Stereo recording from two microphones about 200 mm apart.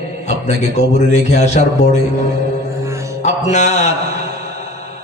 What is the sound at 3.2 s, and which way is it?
Mantra, 35° left (ahead or behind).